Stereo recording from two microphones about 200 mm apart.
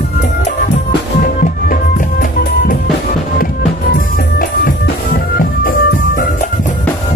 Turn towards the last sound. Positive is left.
turn(degrees=50)  # may be behind; listen again after turning